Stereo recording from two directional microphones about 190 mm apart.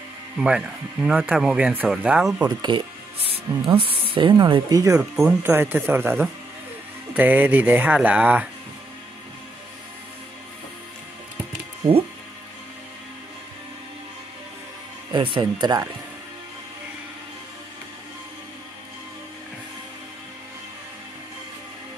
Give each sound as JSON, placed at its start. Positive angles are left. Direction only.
{"t": 0.4, "sound": "speech", "side_deg": -5}
{"t": 2.4, "sound": "speech", "side_deg": -25}
{"t": 15.1, "sound": "speech", "side_deg": -25}